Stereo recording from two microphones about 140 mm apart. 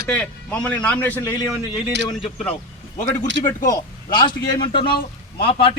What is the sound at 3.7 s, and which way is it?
A man's voice, 30° left (ahead or behind).